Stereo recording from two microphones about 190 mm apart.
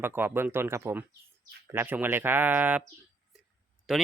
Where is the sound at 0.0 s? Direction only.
10° right (ahead or behind).